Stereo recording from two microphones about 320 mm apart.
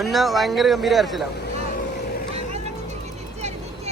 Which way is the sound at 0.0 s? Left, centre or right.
Centre.